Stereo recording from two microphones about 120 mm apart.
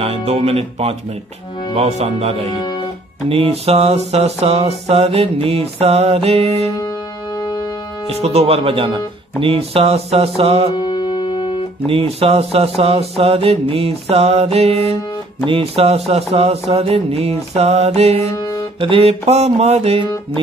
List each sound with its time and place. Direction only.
0.0 s mantra: 55° right (ahead or behind)
8.1 s mantra: 60° right (ahead or behind)
10.8 s music: 40° left (ahead or behind)
11.9 s mantra: 55° right (ahead or behind)